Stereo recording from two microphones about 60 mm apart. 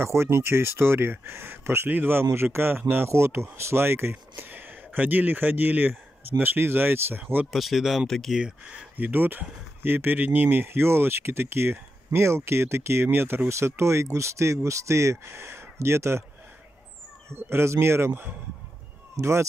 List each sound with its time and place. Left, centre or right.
0.0 s speech: right
2.2 s speech: right
7.5 s speech: centre
8.3 s speech: centre
8.9 s speech: right
17.3 s speech: right
19.2 s speech: right